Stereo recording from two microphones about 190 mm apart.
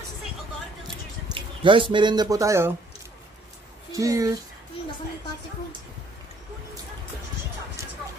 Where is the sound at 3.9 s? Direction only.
15° right (ahead or behind).